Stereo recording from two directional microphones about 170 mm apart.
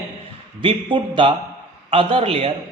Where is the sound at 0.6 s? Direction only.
30° right (ahead or behind).